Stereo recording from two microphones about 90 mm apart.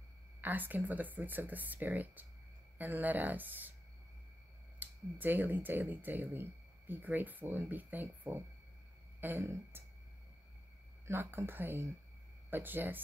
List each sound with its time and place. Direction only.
0.4 s speech: 20° right (ahead or behind)
4.7 s speech: 20° right (ahead or behind)
11.1 s speech: 25° right (ahead or behind)